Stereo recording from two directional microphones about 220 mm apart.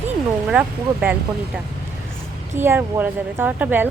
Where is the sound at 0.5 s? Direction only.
5° right (ahead or behind).